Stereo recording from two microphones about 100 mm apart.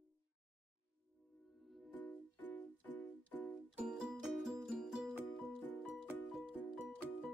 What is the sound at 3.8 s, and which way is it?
Music, 5° right (ahead or behind).